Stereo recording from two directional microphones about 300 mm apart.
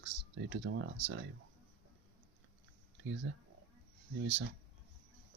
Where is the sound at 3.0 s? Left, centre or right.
Right.